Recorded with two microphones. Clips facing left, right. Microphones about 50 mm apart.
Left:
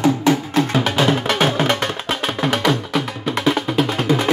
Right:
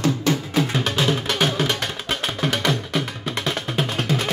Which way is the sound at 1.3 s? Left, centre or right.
Left.